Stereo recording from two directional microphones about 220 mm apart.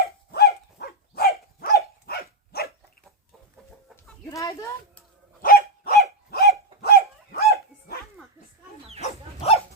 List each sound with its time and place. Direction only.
0.0 s dog: 45° left (ahead or behind)
4.3 s a sound: 15° left (ahead or behind)
5.4 s dog: 40° left (ahead or behind)
9.0 s dog: 30° left (ahead or behind)